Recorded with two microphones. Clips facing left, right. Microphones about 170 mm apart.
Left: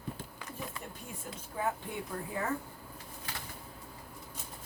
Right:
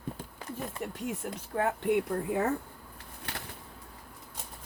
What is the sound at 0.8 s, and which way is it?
Speech, 70° right (ahead or behind).